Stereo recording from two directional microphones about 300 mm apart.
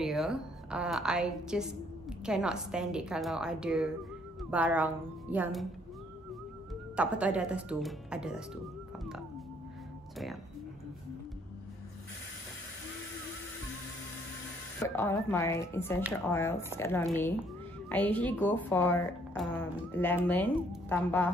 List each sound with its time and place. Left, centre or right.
0.0 s a woman's voice: centre
6.7 s speech: centre
10.1 s speech: centre
15.0 s a woman's voice: centre